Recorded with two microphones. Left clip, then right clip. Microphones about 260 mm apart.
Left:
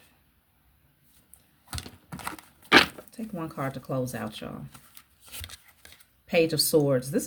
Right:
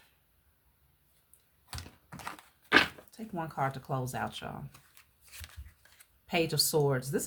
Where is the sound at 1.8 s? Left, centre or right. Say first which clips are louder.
Left 8 dB; left.